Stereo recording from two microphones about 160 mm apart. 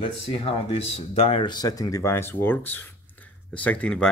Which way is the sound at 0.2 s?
35° left (ahead or behind).